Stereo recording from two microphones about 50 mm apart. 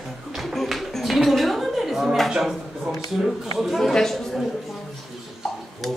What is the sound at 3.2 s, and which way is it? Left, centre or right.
Speech, centre.